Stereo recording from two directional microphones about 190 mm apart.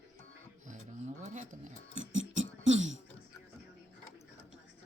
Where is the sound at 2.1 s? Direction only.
40° right (ahead or behind).